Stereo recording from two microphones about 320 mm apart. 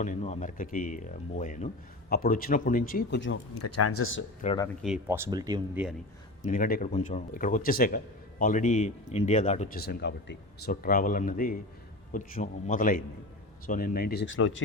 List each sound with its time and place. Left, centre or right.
0.0 s a man's voice: left
3.6 s speech: left
4.4 s speech: centre
4.8 s speech: centre
6.4 s a man's voice: left